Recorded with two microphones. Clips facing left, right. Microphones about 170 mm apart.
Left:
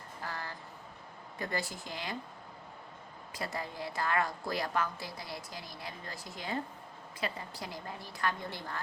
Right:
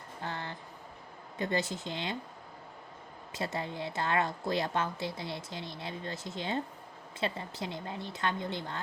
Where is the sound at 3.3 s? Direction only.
25° right (ahead or behind).